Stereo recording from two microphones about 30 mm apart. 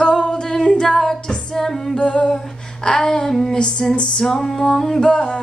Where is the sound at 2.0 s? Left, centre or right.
Left.